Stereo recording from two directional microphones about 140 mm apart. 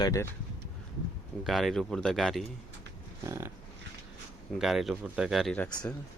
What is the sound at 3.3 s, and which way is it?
Dog, 20° right (ahead or behind).